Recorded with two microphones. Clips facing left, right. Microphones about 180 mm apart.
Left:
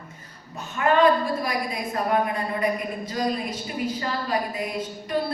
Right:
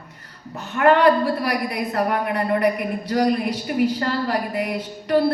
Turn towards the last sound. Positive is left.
turn(degrees=-65)  # may be behind; listen again after turning